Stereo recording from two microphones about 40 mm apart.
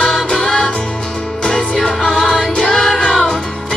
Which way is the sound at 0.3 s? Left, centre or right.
Left.